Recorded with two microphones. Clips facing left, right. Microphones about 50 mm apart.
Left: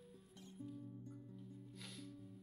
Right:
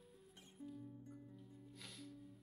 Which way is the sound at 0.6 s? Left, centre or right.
Centre.